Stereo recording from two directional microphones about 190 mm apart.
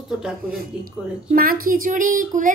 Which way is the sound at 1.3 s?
50° right (ahead or behind).